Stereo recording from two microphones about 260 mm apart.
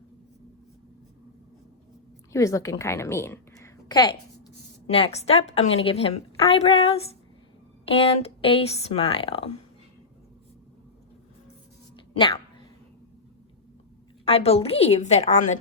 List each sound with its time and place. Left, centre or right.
2.3 s a woman's voice: centre
11.9 s a sound: centre
14.3 s a woman's voice: left